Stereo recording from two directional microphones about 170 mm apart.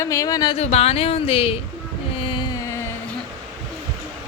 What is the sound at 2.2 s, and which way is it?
Music, 30° left (ahead or behind).